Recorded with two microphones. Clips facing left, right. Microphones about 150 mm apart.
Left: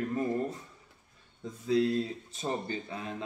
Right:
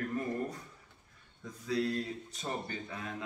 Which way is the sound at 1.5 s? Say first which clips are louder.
Left 6 dB; 25° left (ahead or behind).